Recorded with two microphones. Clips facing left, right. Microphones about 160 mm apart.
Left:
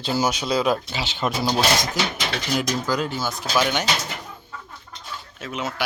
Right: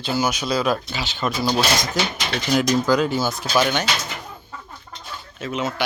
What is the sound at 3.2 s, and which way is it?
Speech, 10° right (ahead or behind).